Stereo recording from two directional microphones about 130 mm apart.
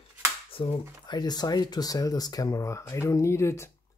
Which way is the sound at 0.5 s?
40° left (ahead or behind).